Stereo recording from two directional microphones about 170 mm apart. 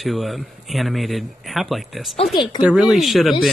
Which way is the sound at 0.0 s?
Centre (ahead or behind).